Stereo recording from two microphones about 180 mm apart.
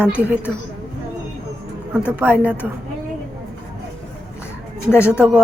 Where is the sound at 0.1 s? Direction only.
10° right (ahead or behind).